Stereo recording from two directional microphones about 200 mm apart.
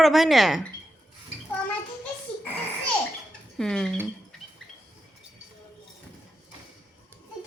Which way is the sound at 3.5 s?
5° left (ahead or behind).